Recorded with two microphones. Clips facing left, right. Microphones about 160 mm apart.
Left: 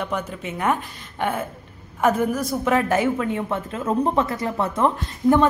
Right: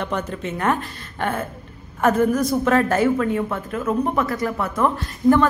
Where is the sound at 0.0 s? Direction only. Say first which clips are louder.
Right 2 dB; 10° left (ahead or behind).